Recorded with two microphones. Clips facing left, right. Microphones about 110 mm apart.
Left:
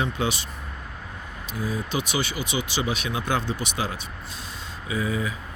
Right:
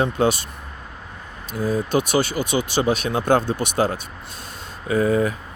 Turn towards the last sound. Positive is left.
turn(degrees=-50)  # may be behind; listen again after turning